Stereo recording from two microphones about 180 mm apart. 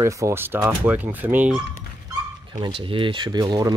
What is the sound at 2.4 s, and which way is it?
Speech, 25° right (ahead or behind).